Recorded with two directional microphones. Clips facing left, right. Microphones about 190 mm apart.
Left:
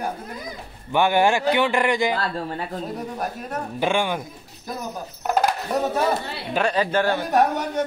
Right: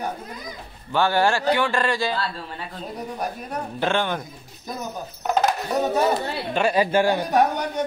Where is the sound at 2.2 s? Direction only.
45° left (ahead or behind).